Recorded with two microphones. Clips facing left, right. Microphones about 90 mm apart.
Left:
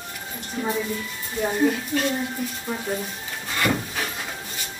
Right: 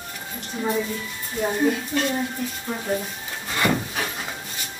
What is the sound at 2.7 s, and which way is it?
Speech, centre (ahead or behind).